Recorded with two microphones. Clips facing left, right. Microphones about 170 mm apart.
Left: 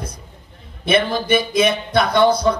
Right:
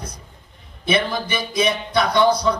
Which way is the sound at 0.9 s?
55° left (ahead or behind).